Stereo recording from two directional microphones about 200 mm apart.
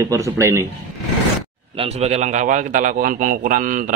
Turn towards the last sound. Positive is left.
turn(degrees=-40)  # may be behind; listen again after turning